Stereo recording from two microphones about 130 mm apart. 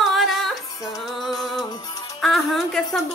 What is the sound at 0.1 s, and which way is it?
Music, centre (ahead or behind).